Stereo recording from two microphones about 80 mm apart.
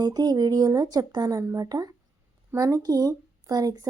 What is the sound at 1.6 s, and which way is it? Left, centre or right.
Speech, right.